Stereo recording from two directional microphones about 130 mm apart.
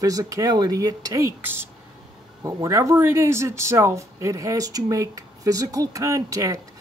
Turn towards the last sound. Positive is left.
turn(degrees=-25)  # may be behind; listen again after turning